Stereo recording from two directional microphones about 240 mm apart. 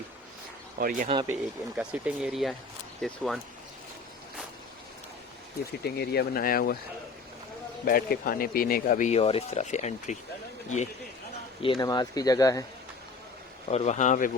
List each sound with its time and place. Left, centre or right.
0.8 s speech: right
1.0 s speech: right
1.3 s speech: centre
5.8 s speech: left
7.9 s speech: left
11.6 s speech: centre
13.7 s speech: left